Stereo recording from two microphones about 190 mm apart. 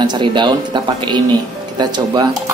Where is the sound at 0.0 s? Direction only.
25° right (ahead or behind).